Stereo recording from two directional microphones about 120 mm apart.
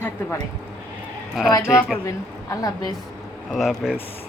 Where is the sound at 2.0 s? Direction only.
30° left (ahead or behind).